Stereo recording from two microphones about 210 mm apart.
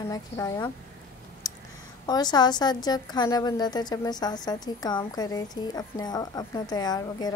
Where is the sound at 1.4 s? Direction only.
15° left (ahead or behind).